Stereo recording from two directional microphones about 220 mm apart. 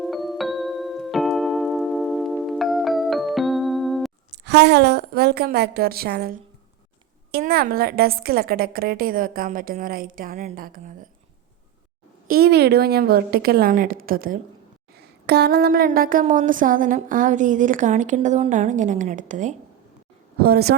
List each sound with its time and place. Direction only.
0.0 s keyboard: centre (ahead or behind)
4.4 s a woman's voice: 50° right (ahead or behind)
7.3 s a sound: 45° right (ahead or behind)
12.3 s a woman's voice: 45° right (ahead or behind)
14.9 s a sound: 50° right (ahead or behind)
20.4 s a woman's voice: 45° right (ahead or behind)